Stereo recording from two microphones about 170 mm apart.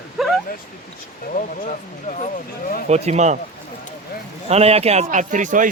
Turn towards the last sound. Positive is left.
turn(degrees=-50)  # may be behind; listen again after turning